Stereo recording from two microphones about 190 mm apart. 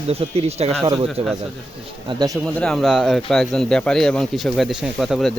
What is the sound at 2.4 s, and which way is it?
Speech, 5° left (ahead or behind).